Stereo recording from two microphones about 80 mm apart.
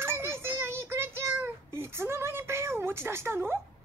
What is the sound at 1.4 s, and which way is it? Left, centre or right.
Cat, right.